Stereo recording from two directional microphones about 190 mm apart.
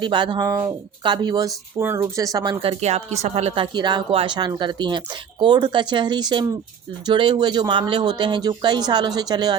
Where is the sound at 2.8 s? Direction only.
35° right (ahead or behind).